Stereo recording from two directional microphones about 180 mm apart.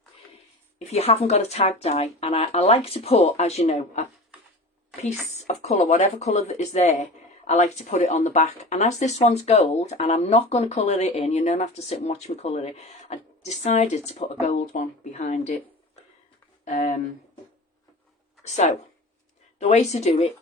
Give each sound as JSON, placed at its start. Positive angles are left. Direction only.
{"t": 0.9, "sound": "speech", "side_deg": 35}
{"t": 5.3, "sound": "speech", "side_deg": 40}
{"t": 16.6, "sound": "speech", "side_deg": 45}
{"t": 18.4, "sound": "speech", "side_deg": 40}